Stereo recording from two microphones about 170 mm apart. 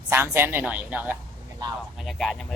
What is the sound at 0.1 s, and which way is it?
Speech, 15° right (ahead or behind).